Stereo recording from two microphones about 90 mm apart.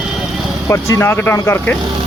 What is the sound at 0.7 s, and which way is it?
Speech, 30° left (ahead or behind).